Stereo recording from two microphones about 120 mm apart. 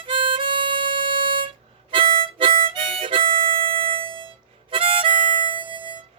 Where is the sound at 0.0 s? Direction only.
45° right (ahead or behind).